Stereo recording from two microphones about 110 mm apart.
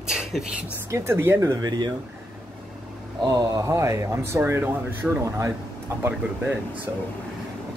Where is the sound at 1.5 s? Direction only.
40° right (ahead or behind).